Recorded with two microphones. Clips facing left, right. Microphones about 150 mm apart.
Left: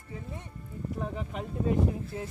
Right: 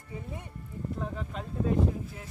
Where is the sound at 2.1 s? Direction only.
30° left (ahead or behind).